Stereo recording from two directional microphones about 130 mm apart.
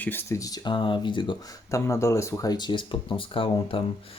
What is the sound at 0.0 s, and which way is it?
Speech, 15° left (ahead or behind).